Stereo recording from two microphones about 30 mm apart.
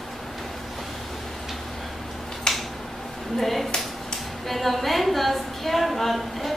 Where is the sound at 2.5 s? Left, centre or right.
Centre.